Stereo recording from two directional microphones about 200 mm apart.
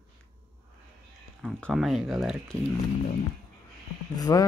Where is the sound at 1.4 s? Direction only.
5° left (ahead or behind).